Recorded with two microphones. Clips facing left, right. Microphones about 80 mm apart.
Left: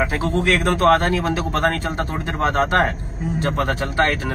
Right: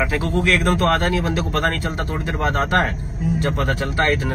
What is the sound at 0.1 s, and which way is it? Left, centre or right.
Speech, left.